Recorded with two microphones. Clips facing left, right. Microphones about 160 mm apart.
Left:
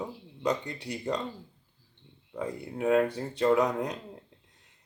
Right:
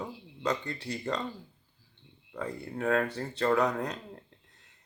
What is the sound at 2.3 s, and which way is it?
Speech, 15° left (ahead or behind).